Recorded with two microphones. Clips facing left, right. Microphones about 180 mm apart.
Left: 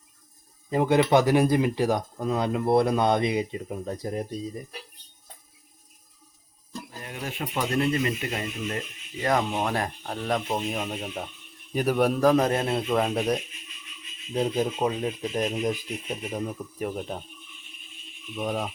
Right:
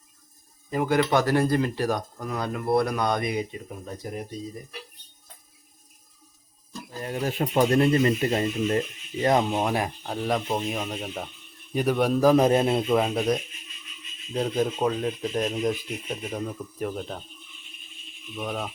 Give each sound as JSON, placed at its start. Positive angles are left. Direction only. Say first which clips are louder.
{"t": 0.7, "sound": "speech", "louder": "left 2 dB", "side_deg": 25}
{"t": 7.0, "sound": "speech", "louder": "right 8 dB", "side_deg": -35}
{"t": 9.2, "sound": "speech", "louder": "right 3 dB", "side_deg": -20}
{"t": 12.9, "sound": "speech", "louder": "right 2 dB", "side_deg": 0}
{"t": 14.3, "sound": "speech", "louder": "even", "side_deg": 10}
{"t": 18.3, "sound": "speech", "louder": "left 2 dB", "side_deg": 10}